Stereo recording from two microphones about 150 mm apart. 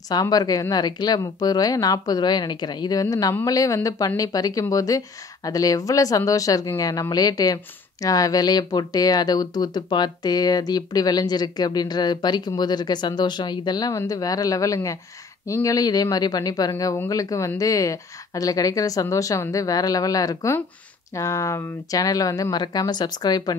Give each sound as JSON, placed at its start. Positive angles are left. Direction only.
{"t": 0.1, "sound": "speech", "side_deg": 25}